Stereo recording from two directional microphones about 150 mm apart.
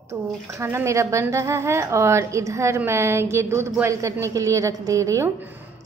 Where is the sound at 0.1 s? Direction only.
20° right (ahead or behind).